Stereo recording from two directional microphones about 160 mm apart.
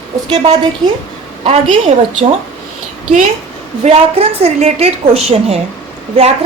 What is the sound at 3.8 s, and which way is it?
A woman's voice, 40° right (ahead or behind).